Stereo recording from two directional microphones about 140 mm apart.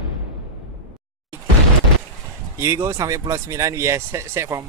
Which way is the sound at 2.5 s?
20° right (ahead or behind).